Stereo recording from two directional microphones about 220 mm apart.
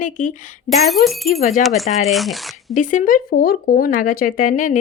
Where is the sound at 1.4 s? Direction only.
30° left (ahead or behind).